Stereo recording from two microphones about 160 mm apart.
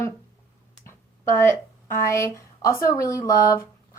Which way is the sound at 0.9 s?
15° left (ahead or behind).